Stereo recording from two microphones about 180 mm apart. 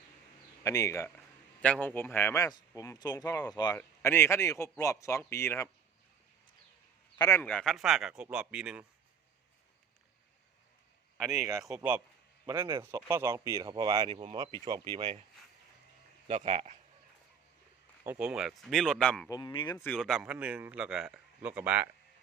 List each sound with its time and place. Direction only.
0.6 s a man's voice: 15° left (ahead or behind)
7.2 s speech: 15° left (ahead or behind); by 8.8 s 5° right (ahead or behind)
11.6 s a man's voice: 5° right (ahead or behind)
12.5 s speech: 20° right (ahead or behind)
16.3 s speech: 35° right (ahead or behind)
18.0 s speech: 10° right (ahead or behind)
19.3 s speech: 25° left (ahead or behind)
19.8 s a man's voice: 5° left (ahead or behind)